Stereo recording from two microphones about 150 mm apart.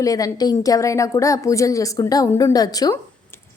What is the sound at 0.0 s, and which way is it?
A woman's voice, 25° left (ahead or behind).